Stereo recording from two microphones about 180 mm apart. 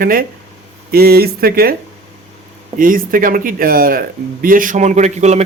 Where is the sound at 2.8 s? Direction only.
50° right (ahead or behind).